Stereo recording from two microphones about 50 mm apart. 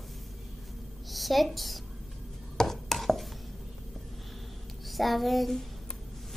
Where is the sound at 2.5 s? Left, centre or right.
Centre.